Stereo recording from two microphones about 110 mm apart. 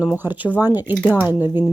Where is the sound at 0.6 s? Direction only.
35° left (ahead or behind).